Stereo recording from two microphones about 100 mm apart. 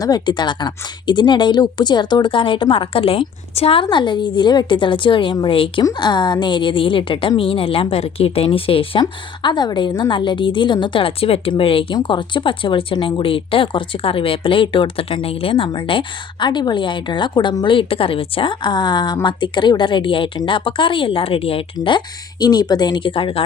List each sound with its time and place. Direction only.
0.0 s speech: 45° left (ahead or behind); by 3.8 s 75° left (ahead or behind)
3.8 s speech: 50° left (ahead or behind)
5.8 s a woman's voice: 45° left (ahead or behind); by 11.9 s 65° left (ahead or behind)
12.0 s a woman's voice: 55° left (ahead or behind)
17.7 s a woman's voice: 65° left (ahead or behind)